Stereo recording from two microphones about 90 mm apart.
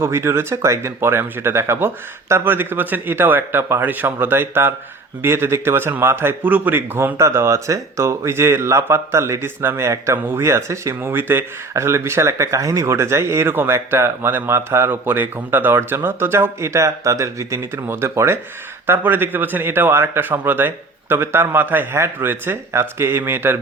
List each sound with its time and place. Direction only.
0.0 s speech: 30° right (ahead or behind)